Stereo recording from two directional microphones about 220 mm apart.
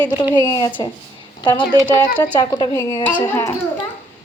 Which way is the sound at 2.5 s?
15° left (ahead or behind).